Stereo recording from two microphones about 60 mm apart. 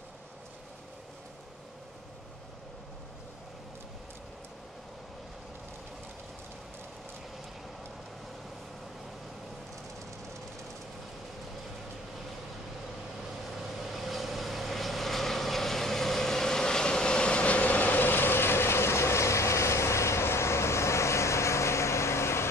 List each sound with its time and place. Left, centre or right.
13.9 s vehicle: centre; by 22.5 s left